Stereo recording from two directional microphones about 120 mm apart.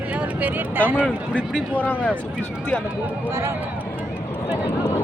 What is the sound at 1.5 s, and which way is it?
Speech, 15° left (ahead or behind).